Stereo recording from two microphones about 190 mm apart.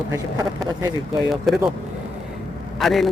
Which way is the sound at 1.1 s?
Centre (ahead or behind).